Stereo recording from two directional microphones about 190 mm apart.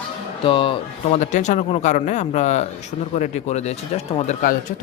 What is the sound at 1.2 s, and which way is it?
Speech, 40° left (ahead or behind).